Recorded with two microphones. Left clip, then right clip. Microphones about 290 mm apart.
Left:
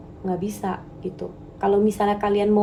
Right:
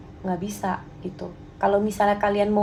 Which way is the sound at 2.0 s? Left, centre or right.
Right.